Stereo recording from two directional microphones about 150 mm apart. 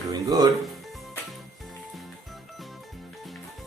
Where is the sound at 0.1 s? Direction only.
25° right (ahead or behind).